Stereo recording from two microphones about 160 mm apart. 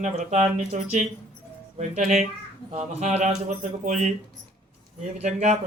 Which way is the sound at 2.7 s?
40° right (ahead or behind).